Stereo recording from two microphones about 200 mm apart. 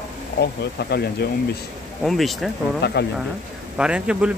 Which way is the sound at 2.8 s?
55° left (ahead or behind).